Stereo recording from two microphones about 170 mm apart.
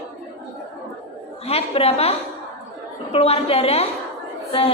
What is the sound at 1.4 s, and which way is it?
A woman's voice, 35° left (ahead or behind).